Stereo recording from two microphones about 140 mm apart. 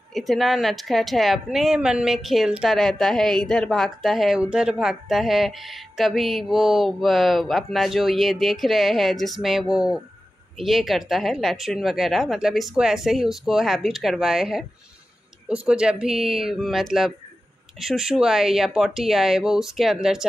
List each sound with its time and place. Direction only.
0.1 s speech: centre (ahead or behind)